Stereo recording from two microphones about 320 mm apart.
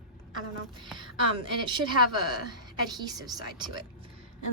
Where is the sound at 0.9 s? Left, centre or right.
Centre.